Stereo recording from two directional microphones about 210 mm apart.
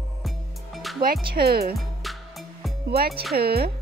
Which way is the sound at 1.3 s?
50° right (ahead or behind).